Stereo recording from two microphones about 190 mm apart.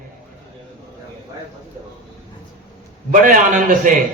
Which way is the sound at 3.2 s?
45° right (ahead or behind).